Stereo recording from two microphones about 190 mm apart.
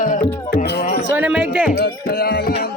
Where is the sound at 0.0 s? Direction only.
45° left (ahead or behind).